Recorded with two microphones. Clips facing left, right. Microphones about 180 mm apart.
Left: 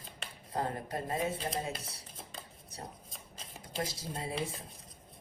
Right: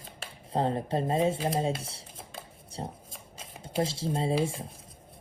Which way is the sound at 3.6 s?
25° right (ahead or behind).